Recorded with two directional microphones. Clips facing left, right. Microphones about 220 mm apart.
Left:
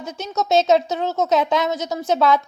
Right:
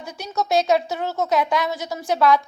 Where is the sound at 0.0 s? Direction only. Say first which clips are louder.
Left 2 dB; 20° left (ahead or behind).